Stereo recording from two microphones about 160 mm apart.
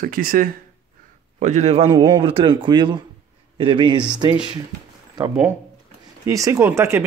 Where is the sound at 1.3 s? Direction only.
45° right (ahead or behind).